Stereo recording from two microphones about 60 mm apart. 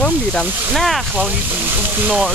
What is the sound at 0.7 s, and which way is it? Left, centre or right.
Speech, centre.